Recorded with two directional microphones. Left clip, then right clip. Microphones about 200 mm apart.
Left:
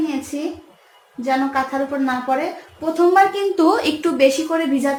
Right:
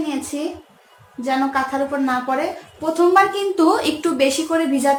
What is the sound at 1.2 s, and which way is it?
A woman's voice, 25° left (ahead or behind).